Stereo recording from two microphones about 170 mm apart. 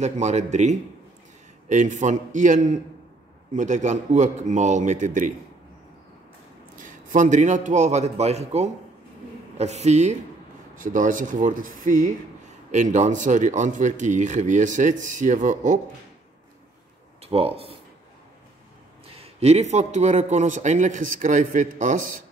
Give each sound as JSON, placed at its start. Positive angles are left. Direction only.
{"t": 0.0, "sound": "a man's voice", "side_deg": -40}
{"t": 6.8, "sound": "a man's voice", "side_deg": -50}
{"t": 17.2, "sound": "speech", "side_deg": -35}
{"t": 19.0, "sound": "a man's voice", "side_deg": -35}